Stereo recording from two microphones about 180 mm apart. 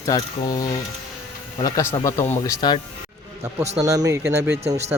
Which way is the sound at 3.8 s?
20° right (ahead or behind).